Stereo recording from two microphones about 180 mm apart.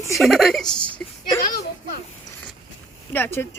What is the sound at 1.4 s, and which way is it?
Speech, 55° left (ahead or behind).